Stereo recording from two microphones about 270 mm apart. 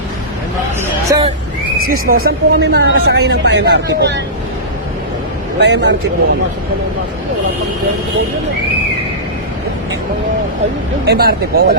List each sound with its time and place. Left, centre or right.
1.1 s speech: centre
1.8 s a woman's voice: right
5.5 s a woman's voice: right
11.0 s a woman's voice: right